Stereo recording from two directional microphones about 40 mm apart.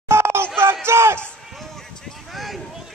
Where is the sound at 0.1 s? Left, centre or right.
Right.